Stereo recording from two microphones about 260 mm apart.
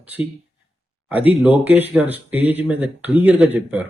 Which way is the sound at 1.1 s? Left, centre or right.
Centre.